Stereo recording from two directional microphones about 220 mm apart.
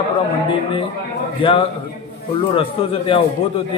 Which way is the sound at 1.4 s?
25° left (ahead or behind).